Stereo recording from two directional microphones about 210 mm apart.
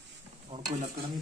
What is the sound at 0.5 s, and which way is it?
Speech, 30° right (ahead or behind).